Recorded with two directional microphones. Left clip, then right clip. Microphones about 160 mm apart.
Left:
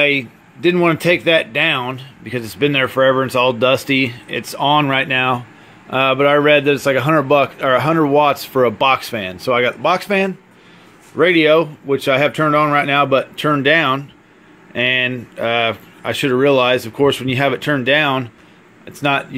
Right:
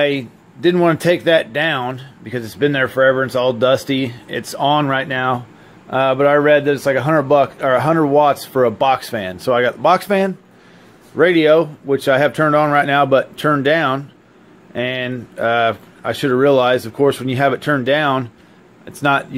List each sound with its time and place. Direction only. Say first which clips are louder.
0.0 s a man's voice: left 2 dB; 5° left (ahead or behind)
3.0 s a man's voice: even; 25° left (ahead or behind); by 19.2 s centre (ahead or behind)